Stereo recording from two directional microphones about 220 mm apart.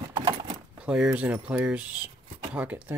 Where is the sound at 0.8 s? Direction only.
5° right (ahead or behind).